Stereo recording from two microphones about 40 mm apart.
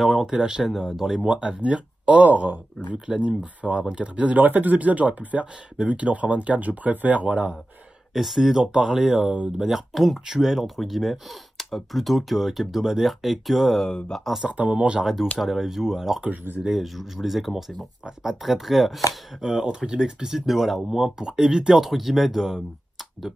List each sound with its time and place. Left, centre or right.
0.0 s speech: centre
1.2 s speech: right
2.2 s speech: right
3.2 s speech: right
4.4 s speech: right
8.1 s speech: centre
10.2 s speech: centre
14.1 s speech: centre
14.5 s speech: right
15.4 s speech: centre